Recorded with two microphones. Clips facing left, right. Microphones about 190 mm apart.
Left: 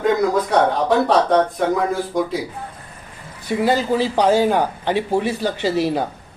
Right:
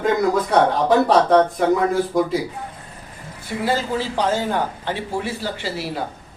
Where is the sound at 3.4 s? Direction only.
15° left (ahead or behind).